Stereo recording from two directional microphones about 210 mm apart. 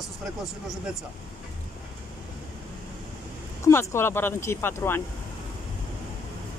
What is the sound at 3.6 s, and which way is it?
Speech, 15° left (ahead or behind).